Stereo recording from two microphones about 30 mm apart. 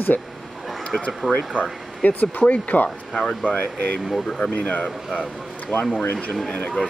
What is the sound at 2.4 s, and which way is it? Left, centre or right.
Speech, left.